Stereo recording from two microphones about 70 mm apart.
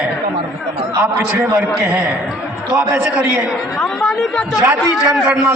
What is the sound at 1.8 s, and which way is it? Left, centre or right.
A man's voice, centre.